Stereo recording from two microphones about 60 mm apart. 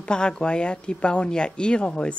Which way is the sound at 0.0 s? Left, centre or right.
Centre.